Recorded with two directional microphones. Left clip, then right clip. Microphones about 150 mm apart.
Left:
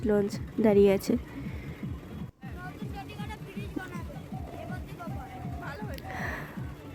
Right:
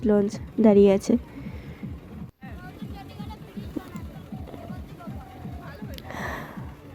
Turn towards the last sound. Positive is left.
turn(degrees=-25)  # may be behind; listen again after turning